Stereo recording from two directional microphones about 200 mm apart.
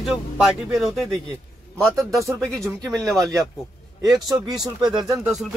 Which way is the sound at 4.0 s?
20° right (ahead or behind).